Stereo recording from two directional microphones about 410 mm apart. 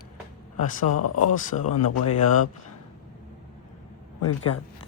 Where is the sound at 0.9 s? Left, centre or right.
Left.